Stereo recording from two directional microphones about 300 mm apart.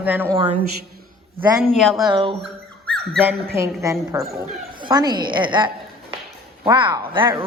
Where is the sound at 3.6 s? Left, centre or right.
Centre.